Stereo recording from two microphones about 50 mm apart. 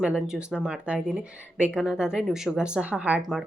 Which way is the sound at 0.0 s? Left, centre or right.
Right.